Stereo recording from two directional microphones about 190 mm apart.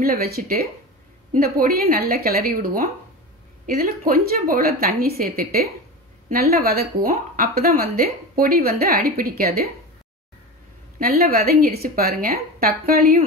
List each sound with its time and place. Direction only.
0.0 s speech: 50° right (ahead or behind)
11.0 s speech: 50° right (ahead or behind)